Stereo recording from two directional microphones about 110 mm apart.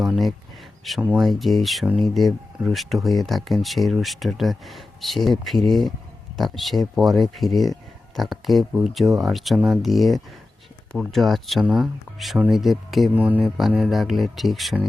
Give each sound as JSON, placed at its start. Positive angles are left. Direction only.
{"t": 0.9, "sound": "speech", "side_deg": 0}
{"t": 13.1, "sound": "speech", "side_deg": -15}
{"t": 13.6, "sound": "speech", "side_deg": -5}